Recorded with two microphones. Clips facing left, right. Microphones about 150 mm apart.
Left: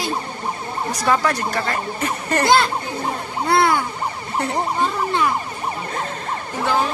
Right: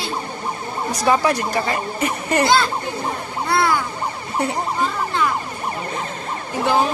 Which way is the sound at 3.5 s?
20° left (ahead or behind).